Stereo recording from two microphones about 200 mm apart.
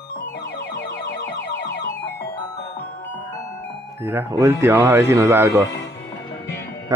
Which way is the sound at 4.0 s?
15° right (ahead or behind).